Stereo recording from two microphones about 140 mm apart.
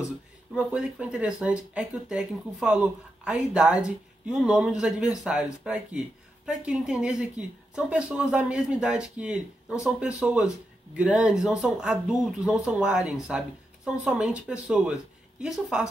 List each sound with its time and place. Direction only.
0.6 s speech: 5° right (ahead or behind)